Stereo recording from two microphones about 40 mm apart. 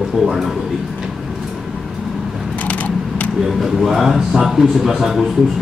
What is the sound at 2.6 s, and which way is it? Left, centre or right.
Mechanisms, left.